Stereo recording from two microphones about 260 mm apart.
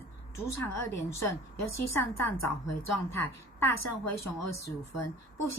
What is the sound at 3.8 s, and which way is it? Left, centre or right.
Speech, left.